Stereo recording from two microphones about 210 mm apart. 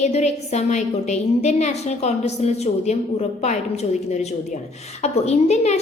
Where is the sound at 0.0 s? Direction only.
30° left (ahead or behind).